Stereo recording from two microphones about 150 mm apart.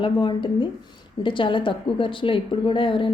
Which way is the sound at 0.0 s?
30° left (ahead or behind).